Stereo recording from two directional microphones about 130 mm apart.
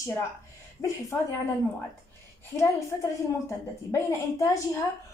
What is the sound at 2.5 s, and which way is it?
A woman's voice, 25° left (ahead or behind).